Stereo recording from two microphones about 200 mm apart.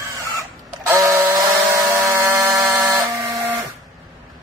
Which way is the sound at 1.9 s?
15° right (ahead or behind).